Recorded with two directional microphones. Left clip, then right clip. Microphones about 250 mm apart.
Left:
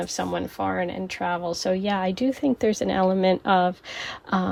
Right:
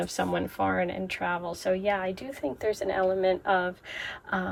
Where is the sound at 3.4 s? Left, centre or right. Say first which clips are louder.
Left 6 dB; centre.